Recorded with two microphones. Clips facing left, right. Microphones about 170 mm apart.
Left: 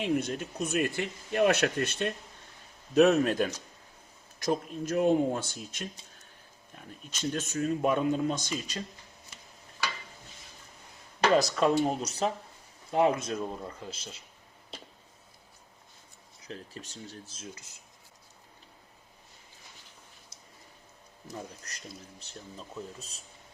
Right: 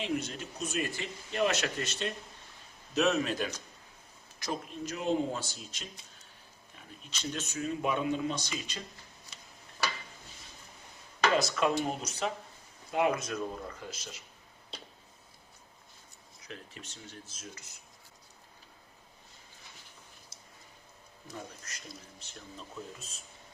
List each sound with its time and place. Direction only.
0.0 s speech: 55° left (ahead or behind)
11.3 s speech: 35° left (ahead or behind)
16.5 s speech: 35° left (ahead or behind)
21.7 s speech: 35° left (ahead or behind)